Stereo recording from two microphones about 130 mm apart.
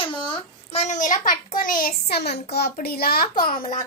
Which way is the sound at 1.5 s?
90° left.